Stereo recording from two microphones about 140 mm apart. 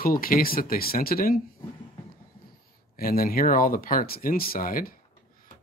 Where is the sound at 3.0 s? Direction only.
90° left.